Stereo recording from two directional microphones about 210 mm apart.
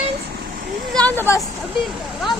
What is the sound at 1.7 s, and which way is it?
Speech, centre (ahead or behind).